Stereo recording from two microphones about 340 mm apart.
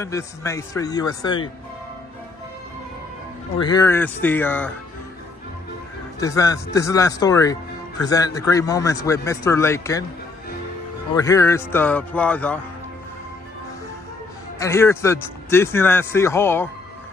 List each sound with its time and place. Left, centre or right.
0.0 s a man's voice: centre
3.5 s a man's voice: centre
6.1 s a man's voice: centre
11.1 s a man's voice: centre
14.6 s a man's voice: centre